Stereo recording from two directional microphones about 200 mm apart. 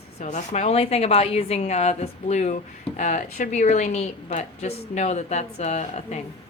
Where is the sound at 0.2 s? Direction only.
35° left (ahead or behind).